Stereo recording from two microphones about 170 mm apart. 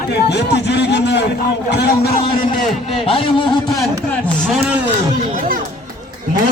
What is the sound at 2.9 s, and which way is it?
Speech, 35° left (ahead or behind).